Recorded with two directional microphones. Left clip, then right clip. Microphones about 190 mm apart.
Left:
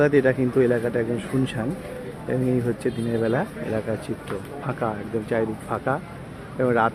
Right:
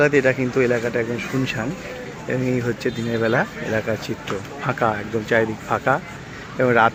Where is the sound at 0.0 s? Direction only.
20° left (ahead or behind).